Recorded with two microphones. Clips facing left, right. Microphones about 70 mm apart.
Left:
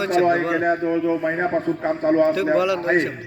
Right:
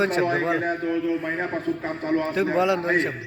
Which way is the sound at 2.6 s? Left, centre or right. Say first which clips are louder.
Left 1 dB; right.